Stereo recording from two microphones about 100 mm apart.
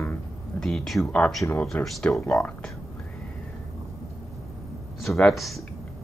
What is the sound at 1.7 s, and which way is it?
Speech, 15° left (ahead or behind).